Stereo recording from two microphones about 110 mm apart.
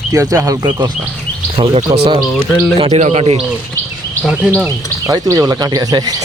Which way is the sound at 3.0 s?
75° right (ahead or behind).